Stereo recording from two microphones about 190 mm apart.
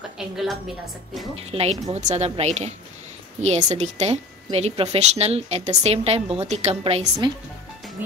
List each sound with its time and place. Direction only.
1.5 s a woman's voice: 30° right (ahead or behind)